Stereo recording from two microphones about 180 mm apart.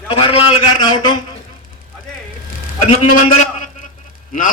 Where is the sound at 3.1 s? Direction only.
45° left (ahead or behind).